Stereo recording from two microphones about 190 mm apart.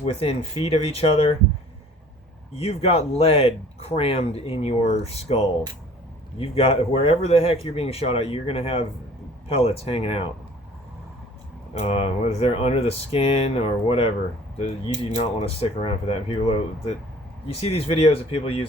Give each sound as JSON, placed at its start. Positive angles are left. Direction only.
{"t": 0.0, "sound": "speech", "side_deg": 30}
{"t": 2.6, "sound": "speech", "side_deg": 30}
{"t": 11.7, "sound": "speech", "side_deg": 30}
{"t": 15.1, "sound": "speech", "side_deg": 35}